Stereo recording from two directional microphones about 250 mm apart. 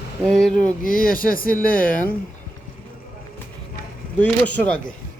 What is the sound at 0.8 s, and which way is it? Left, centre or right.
Speech, left.